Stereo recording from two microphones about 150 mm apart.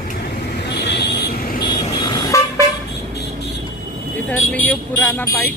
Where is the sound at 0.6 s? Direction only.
90° left.